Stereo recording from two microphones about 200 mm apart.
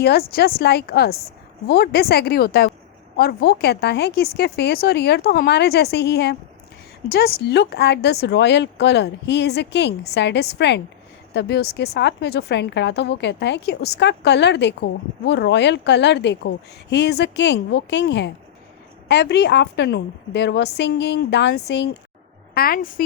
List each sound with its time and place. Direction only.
0.0 s a woman's voice: 50° left (ahead or behind)
22.5 s a woman's voice: 45° left (ahead or behind)